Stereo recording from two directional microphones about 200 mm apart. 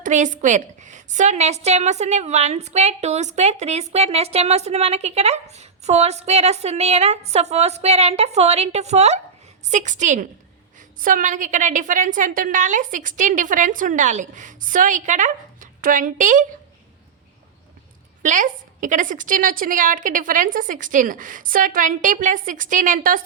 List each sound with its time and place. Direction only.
0.0 s a woman's voice: 40° right (ahead or behind)
18.2 s a woman's voice: 40° right (ahead or behind)